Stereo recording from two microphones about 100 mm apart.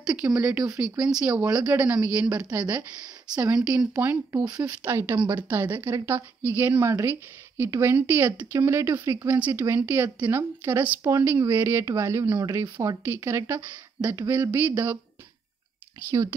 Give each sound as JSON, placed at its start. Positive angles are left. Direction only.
{"t": 0.0, "sound": "a woman's voice", "side_deg": -10}
{"t": 4.3, "sound": "speech", "side_deg": -35}
{"t": 4.9, "sound": "a woman's voice", "side_deg": -25}
{"t": 12.6, "sound": "speech", "side_deg": -40}
{"t": 13.0, "sound": "a woman's voice", "side_deg": -25}
{"t": 16.1, "sound": "speech", "side_deg": -30}